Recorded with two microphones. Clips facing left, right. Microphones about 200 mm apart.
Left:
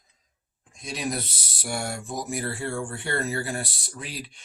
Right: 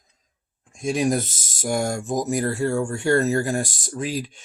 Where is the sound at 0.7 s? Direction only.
45° right (ahead or behind).